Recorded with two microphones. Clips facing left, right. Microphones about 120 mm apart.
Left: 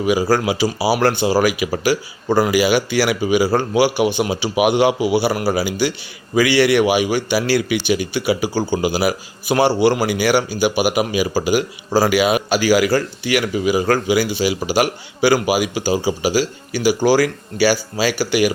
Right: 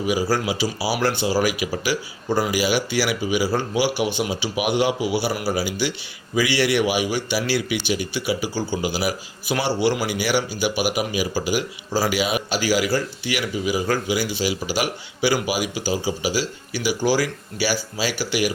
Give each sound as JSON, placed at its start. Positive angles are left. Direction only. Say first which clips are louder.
{"t": 0.0, "sound": "a man's voice", "louder": "left 5 dB", "side_deg": 70}
{"t": 1.9, "sound": "speech", "louder": "left 6 dB", "side_deg": 40}
{"t": 2.3, "sound": "a man's voice", "louder": "left 6 dB", "side_deg": 70}